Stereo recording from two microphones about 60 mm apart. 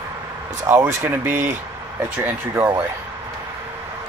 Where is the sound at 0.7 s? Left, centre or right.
Right.